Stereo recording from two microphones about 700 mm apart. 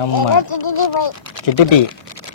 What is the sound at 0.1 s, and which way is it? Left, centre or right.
Speech, left.